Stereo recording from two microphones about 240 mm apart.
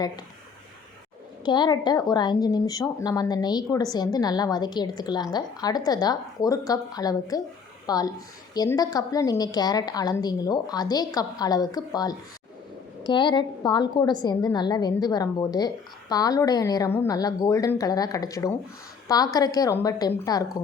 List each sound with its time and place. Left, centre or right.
1.5 s a woman's voice: centre